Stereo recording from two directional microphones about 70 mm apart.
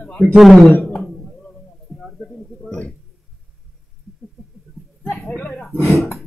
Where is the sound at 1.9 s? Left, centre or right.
Centre.